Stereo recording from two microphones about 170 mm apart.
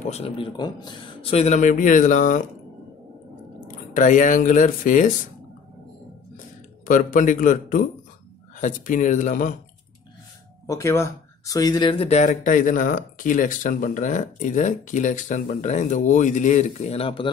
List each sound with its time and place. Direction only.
0.0 s speech: 35° left (ahead or behind)
0.6 s speech: 25° left (ahead or behind)
1.3 s speech: 40° left (ahead or behind)
3.6 s speech: 50° left (ahead or behind)
6.9 s speech: 50° left (ahead or behind)
10.7 s speech: 15° left (ahead or behind); by 17.3 s 35° left (ahead or behind)